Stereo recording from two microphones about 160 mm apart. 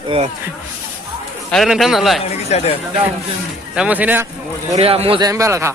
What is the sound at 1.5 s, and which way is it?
Speech, centre (ahead or behind).